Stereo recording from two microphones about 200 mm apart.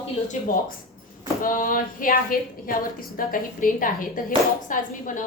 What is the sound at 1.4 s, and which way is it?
A woman's voice, 45° left (ahead or behind).